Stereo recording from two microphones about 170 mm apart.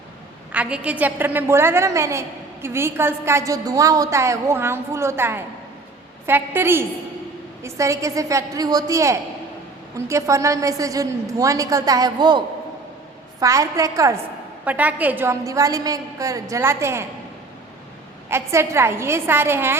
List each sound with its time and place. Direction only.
0.5 s a woman's voice: 5° right (ahead or behind); by 12.4 s 25° right (ahead or behind)
13.4 s a woman's voice: 20° right (ahead or behind)
18.3 s a woman's voice: 15° right (ahead or behind)